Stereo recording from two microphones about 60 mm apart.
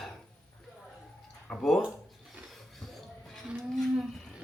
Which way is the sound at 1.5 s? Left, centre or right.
Centre.